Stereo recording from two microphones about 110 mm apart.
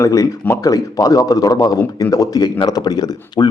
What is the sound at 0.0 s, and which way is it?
A man's voice, 30° left (ahead or behind).